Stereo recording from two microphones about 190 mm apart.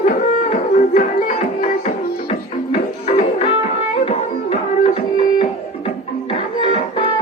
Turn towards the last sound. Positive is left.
turn(degrees=30)  # may be behind; listen again after turning